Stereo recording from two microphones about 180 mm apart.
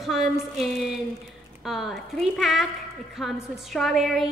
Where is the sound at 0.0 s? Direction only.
Centre (ahead or behind).